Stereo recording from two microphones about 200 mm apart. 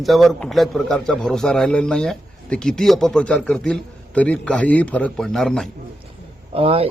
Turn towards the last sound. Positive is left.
turn(degrees=-25)  # may be behind; listen again after turning